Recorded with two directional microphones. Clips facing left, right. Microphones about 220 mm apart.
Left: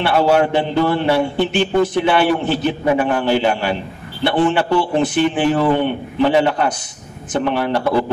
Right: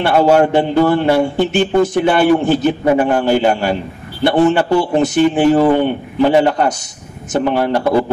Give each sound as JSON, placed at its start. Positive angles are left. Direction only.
{"t": 0.0, "sound": "a man's voice", "side_deg": -45}